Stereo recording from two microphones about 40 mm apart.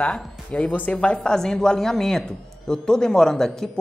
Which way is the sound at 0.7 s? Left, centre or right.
Left.